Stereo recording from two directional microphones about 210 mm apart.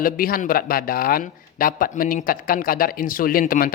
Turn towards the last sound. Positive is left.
turn(degrees=40)  # may be behind; listen again after turning